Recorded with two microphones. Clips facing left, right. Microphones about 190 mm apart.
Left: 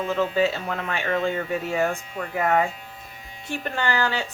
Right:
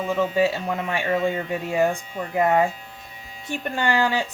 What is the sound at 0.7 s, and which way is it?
Speech, 15° right (ahead or behind).